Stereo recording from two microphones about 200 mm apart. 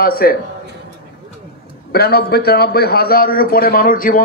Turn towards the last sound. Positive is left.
turn(degrees=45)  # may be behind; listen again after turning